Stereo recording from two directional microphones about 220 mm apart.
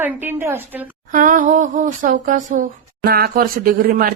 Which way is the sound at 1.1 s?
40° right (ahead or behind).